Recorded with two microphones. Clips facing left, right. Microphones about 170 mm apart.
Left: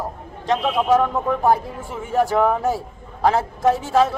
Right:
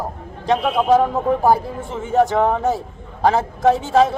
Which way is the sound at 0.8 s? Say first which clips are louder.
Right 3 dB; 30° right (ahead or behind).